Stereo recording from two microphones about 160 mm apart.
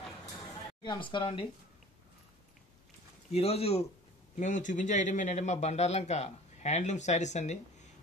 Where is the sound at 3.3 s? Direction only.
40° left (ahead or behind).